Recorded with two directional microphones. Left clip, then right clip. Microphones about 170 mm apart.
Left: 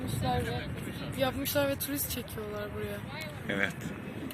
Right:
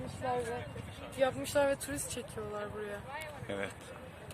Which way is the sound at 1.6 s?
50° right (ahead or behind).